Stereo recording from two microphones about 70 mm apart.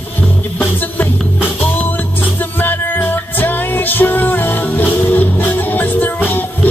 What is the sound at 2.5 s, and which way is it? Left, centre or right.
Music, left.